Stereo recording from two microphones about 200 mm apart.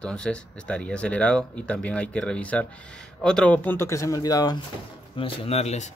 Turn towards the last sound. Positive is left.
turn(degrees=35)  # may be behind; listen again after turning